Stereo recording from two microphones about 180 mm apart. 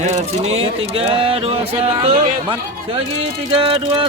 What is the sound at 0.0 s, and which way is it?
Speech, 40° right (ahead or behind).